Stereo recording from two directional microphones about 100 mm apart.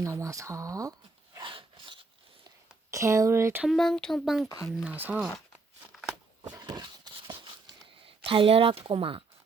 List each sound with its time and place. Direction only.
0.0 s speech: 30° right (ahead or behind)
1.4 s a sound: 55° right (ahead or behind)
2.9 s speech: 30° right (ahead or behind)
3.7 s speech: 5° left (ahead or behind)
4.4 s speech: 35° left (ahead or behind)
4.7 s speech: 10° right (ahead or behind)
6.5 s a sound: 45° right (ahead or behind)
8.0 s speech: 65° right (ahead or behind)